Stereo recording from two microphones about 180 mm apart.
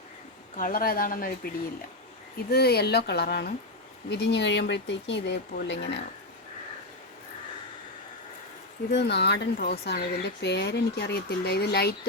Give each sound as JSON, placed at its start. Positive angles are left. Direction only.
{"t": 0.5, "sound": "speech", "side_deg": 50}
{"t": 2.5, "sound": "speech", "side_deg": 60}
{"t": 4.1, "sound": "speech", "side_deg": 75}
{"t": 8.9, "sound": "speech", "side_deg": 70}